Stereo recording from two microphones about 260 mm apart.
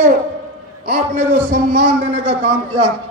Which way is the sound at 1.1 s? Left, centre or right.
Right.